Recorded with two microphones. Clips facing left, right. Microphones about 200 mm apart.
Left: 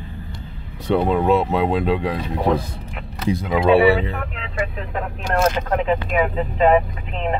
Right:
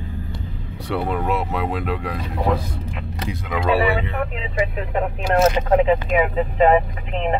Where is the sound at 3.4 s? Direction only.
25° left (ahead or behind).